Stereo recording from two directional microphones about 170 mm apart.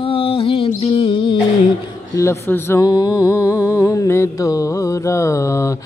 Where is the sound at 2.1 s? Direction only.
15° left (ahead or behind).